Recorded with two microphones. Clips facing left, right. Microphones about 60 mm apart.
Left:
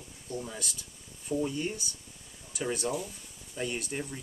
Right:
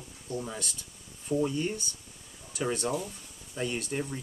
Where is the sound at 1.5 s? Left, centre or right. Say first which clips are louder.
Right 2 dB; centre.